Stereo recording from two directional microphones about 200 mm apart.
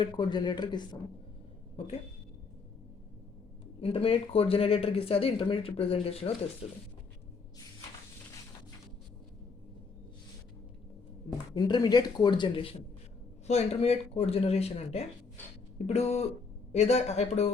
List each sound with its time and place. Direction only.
0.0 s speech: 20° left (ahead or behind)
3.8 s speech: 30° left (ahead or behind)
11.5 s speech: 20° left (ahead or behind)